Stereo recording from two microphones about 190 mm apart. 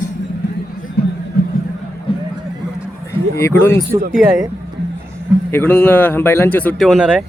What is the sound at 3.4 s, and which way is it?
Speech, 15° left (ahead or behind).